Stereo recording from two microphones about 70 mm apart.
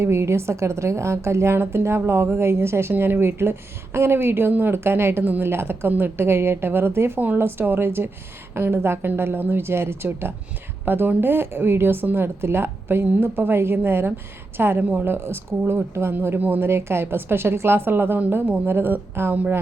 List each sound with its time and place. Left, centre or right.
0.0 s a woman's voice: right
19.3 s speech: right